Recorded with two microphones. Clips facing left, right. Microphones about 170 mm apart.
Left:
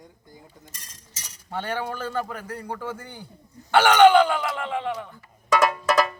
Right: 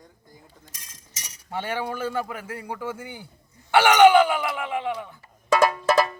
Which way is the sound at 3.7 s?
10° right (ahead or behind).